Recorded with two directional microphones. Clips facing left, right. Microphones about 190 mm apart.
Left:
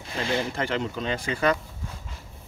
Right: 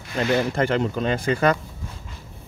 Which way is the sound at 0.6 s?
50° right (ahead or behind).